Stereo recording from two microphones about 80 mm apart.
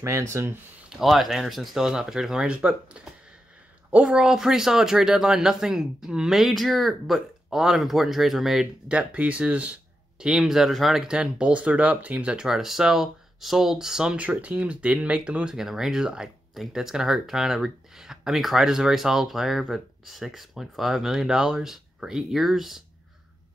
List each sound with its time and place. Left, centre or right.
0.0 s speech: right
0.9 s speech: centre
8.8 s speech: centre